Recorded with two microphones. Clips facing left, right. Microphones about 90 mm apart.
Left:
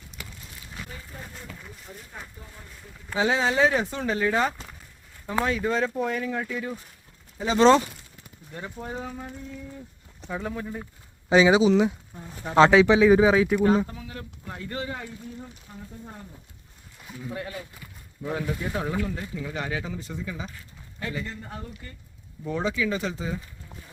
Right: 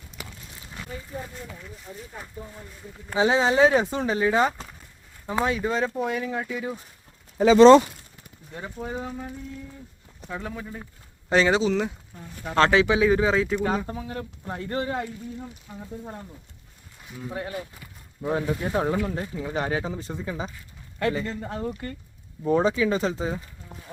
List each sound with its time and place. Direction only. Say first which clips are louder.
3.1 s speech: right 3 dB; 20° right (ahead or behind)
8.5 s speech: right 2 dB; 5° right (ahead or behind)
12.8 s speech: left 3 dB; 10° right (ahead or behind)
13.1 s speech: left 3 dB; 10° left (ahead or behind)
13.8 s speech: right 5 dB; 35° right (ahead or behind)
17.2 s speech: right 3 dB; 30° right (ahead or behind)
21.2 s speech: right 7 dB; 80° right
22.4 s speech: right 6 dB; 35° right (ahead or behind)